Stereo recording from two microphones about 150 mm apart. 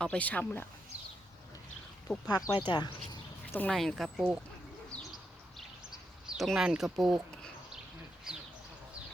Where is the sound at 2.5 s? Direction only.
30° left (ahead or behind).